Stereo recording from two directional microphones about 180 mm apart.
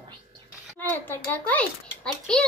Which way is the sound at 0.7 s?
10° left (ahead or behind).